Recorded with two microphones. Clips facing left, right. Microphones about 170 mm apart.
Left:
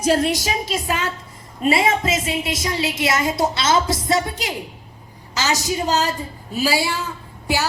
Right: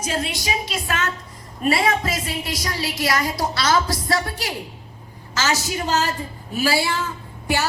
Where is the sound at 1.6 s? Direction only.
20° left (ahead or behind).